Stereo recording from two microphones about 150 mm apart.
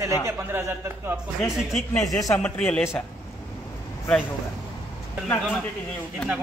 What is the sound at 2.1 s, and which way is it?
Speech, 20° left (ahead or behind).